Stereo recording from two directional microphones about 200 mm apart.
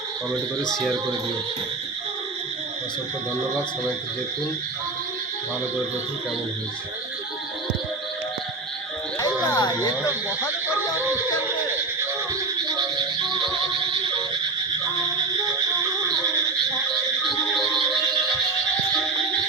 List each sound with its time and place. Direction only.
0.7 s speech: centre (ahead or behind)
9.1 s a sound: 20° left (ahead or behind)
17.2 s music: centre (ahead or behind)